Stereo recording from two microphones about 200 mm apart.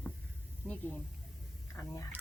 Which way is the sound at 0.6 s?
10° right (ahead or behind).